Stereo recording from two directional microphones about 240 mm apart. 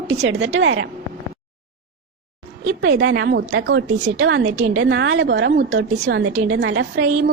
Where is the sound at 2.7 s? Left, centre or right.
Right.